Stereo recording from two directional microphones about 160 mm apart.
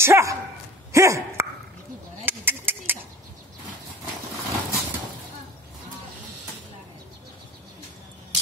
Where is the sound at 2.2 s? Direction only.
15° right (ahead or behind).